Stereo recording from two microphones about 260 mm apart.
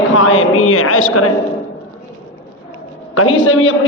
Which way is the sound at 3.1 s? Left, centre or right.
Left.